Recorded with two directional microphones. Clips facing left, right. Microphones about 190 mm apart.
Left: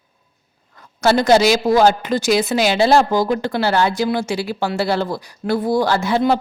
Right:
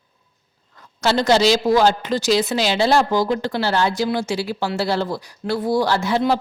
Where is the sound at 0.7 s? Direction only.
50° left (ahead or behind).